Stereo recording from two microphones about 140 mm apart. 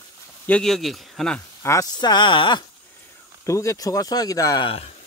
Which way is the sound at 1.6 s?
20° left (ahead or behind).